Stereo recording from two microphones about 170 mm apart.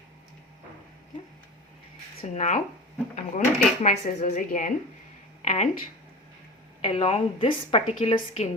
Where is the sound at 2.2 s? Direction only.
45° left (ahead or behind).